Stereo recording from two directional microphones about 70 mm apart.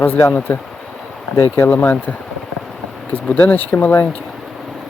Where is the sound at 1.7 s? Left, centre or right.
Left.